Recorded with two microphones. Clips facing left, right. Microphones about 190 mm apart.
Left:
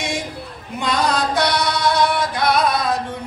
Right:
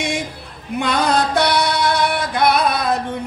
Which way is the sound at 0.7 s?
55° right (ahead or behind).